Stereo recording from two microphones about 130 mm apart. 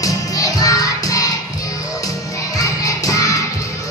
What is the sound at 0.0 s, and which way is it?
Music, 25° left (ahead or behind).